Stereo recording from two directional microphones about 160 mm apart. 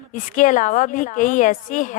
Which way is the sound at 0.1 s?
55° left (ahead or behind).